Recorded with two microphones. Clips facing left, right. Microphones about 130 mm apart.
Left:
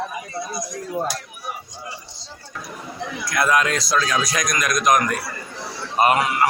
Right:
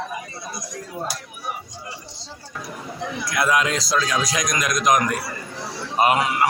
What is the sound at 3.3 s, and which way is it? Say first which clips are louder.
A man's voice: left 1 dB; 10° right (ahead or behind).